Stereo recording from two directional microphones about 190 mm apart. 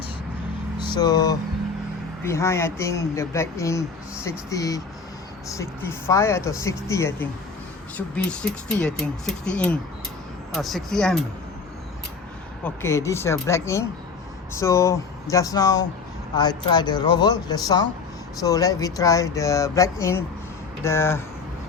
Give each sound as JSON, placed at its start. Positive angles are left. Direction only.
{"t": 0.8, "sound": "speech", "side_deg": 20}
{"t": 12.6, "sound": "speech", "side_deg": 15}